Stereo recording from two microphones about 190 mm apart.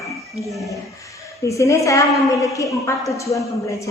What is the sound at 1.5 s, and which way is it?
A woman's voice, 15° left (ahead or behind).